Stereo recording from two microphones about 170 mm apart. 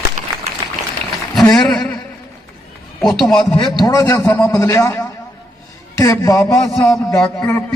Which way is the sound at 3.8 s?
20° left (ahead or behind).